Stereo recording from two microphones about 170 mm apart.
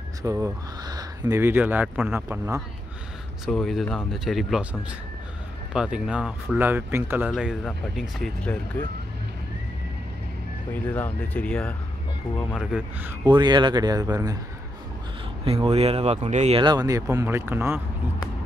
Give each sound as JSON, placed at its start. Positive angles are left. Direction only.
{"t": 0.2, "sound": "speech", "side_deg": -20}
{"t": 3.4, "sound": "speech", "side_deg": 0}
{"t": 5.7, "sound": "speech", "side_deg": -5}
{"t": 7.2, "sound": "speech", "side_deg": 0}
{"t": 10.7, "sound": "speech", "side_deg": 10}
{"t": 12.5, "sound": "speech", "side_deg": -10}
{"t": 13.3, "sound": "speech", "side_deg": -25}
{"t": 15.4, "sound": "speech", "side_deg": -35}
{"t": 16.6, "sound": "speech", "side_deg": -20}